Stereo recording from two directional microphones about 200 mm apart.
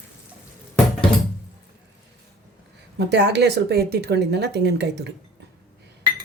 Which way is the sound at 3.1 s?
60° right (ahead or behind).